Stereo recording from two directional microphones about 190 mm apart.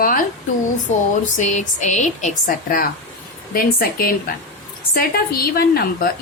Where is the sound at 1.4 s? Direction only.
40° left (ahead or behind).